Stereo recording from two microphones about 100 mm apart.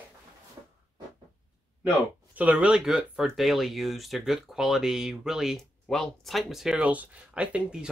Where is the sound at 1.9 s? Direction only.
15° right (ahead or behind).